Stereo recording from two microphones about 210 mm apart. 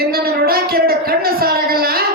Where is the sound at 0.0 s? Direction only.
45° right (ahead or behind).